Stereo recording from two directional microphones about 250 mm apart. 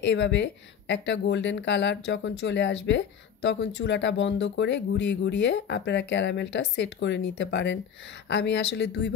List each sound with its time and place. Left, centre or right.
0.0 s speech: left